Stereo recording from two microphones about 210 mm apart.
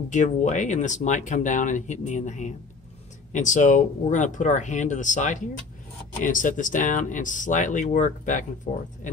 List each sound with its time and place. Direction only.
0.1 s speech: 35° left (ahead or behind)